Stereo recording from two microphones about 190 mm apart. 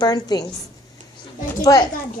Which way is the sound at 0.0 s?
20° left (ahead or behind).